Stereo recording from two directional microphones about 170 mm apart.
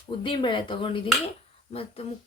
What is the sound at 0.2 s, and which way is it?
Speech, 30° left (ahead or behind).